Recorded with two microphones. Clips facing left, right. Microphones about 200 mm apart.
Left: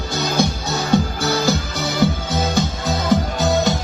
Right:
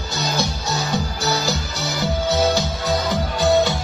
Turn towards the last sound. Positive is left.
turn(degrees=45)  # may be behind; listen again after turning